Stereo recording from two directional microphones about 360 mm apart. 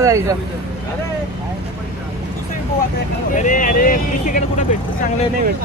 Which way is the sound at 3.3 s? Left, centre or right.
Left.